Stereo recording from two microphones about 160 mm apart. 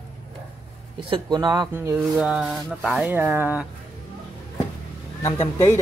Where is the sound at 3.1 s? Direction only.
10° right (ahead or behind).